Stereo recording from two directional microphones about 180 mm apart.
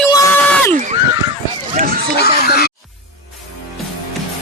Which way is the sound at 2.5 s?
60° left (ahead or behind).